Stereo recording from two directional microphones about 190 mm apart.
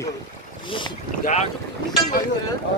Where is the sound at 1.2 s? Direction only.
35° left (ahead or behind).